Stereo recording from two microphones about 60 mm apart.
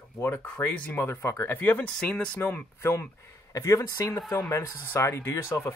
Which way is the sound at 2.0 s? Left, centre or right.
Centre.